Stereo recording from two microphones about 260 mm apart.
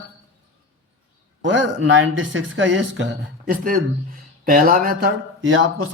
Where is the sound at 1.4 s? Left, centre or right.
Right.